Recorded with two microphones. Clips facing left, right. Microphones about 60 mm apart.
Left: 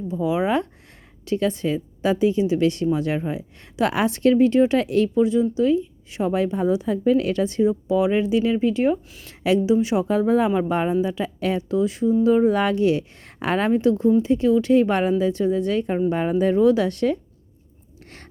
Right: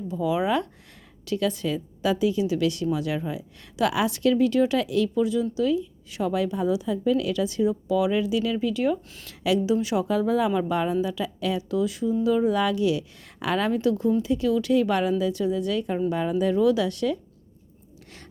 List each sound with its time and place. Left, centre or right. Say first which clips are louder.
0.1 s a woman's voice: left 2 dB; left